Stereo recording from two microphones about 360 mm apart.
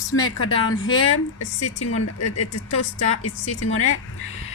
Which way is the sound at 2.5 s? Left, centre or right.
Left.